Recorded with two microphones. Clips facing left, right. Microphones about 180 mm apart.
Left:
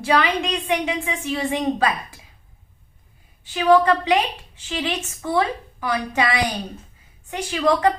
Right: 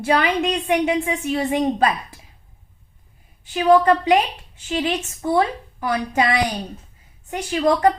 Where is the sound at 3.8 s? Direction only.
45° right (ahead or behind).